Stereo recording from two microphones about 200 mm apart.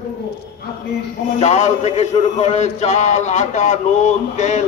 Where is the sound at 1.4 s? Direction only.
35° left (ahead or behind).